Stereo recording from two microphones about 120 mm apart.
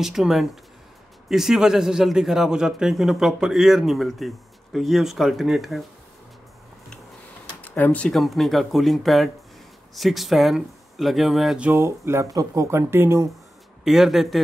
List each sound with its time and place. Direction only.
0.0 s a man's voice: 5° right (ahead or behind)
7.6 s speech: 10° left (ahead or behind)
8.1 s a man's voice: centre (ahead or behind)
11.7 s speech: 20° right (ahead or behind)
13.8 s a man's voice: centre (ahead or behind)